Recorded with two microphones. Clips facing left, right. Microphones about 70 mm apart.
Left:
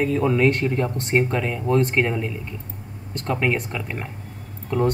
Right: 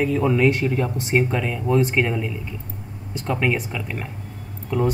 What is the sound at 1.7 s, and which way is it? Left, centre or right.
Speech, centre.